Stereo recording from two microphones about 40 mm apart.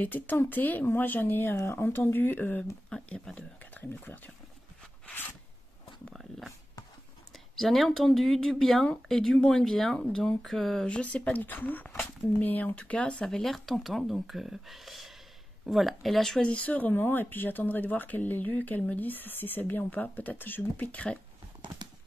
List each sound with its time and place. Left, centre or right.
0.0 s speech: left
3.3 s a sound: left
7.5 s speech: centre
9.9 s speech: left
10.4 s speech: centre
10.9 s speech: left
11.3 s speech: left
12.7 s speech: left
13.2 s speech: centre
16.3 s speech: left
16.9 s speech: left
19.8 s speech: left
20.9 s speech: left